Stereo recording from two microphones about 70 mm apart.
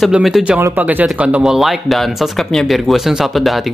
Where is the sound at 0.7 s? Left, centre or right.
Right.